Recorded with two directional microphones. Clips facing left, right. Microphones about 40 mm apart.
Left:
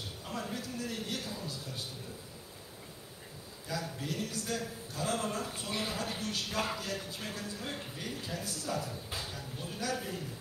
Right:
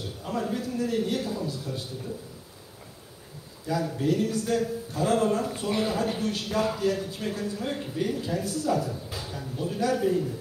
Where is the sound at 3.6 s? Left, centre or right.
Right.